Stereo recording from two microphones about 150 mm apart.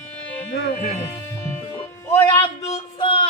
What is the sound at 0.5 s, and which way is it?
Speech, 70° left (ahead or behind).